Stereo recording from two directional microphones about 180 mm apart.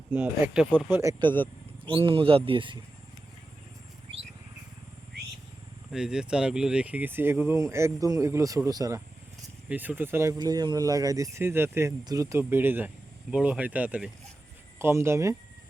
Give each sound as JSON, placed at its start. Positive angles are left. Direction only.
{"t": 0.1, "sound": "speech", "side_deg": -10}
{"t": 1.8, "sound": "speech", "side_deg": -30}
{"t": 5.9, "sound": "speech", "side_deg": -5}